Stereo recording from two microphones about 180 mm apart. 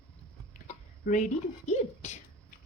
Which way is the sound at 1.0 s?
45° left (ahead or behind).